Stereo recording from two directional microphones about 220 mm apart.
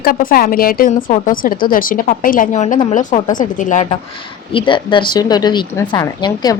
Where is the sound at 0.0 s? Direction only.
40° left (ahead or behind).